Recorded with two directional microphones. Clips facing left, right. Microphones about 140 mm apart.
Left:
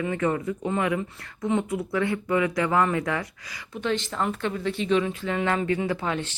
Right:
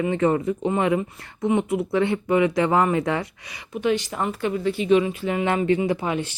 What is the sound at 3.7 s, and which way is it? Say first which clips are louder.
Speech: right 4 dB; 15° right (ahead or behind).